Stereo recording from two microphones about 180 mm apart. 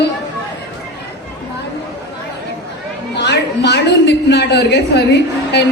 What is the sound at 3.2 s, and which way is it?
A woman's voice, 65° left (ahead or behind).